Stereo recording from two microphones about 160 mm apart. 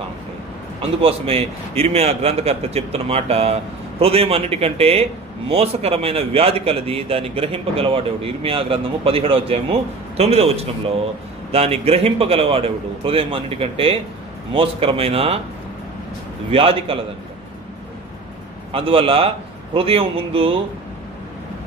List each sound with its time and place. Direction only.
1.0 s a man's voice: 35° right (ahead or behind)
16.4 s a man's voice: 35° right (ahead or behind)
18.7 s a man's voice: 35° right (ahead or behind)